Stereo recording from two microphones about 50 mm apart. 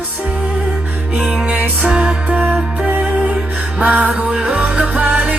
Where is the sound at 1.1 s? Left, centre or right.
Right.